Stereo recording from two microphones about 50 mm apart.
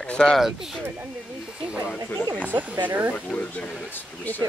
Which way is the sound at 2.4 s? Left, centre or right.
Right.